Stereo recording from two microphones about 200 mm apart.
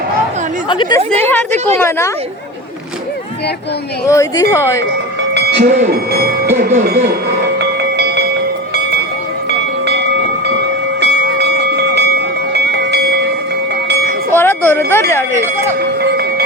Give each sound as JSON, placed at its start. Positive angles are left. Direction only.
{"t": 0.7, "sound": "speech", "side_deg": 20}
{"t": 1.2, "sound": "a woman's voice", "side_deg": 10}
{"t": 4.0, "sound": "a woman's voice", "side_deg": 15}
{"t": 5.3, "sound": "a sound", "side_deg": -55}
{"t": 6.7, "sound": "speech", "side_deg": -50}
{"t": 7.9, "sound": "a sound", "side_deg": -55}
{"t": 8.7, "sound": "train", "side_deg": -55}
{"t": 11.0, "sound": "train", "side_deg": -55}
{"t": 14.3, "sound": "a sound", "side_deg": 10}